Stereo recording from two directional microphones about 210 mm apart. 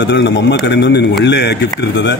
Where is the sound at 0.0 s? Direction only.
55° left (ahead or behind).